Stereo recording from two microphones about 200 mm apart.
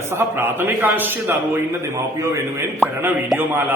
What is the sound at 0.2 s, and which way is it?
A man's voice, 10° right (ahead or behind).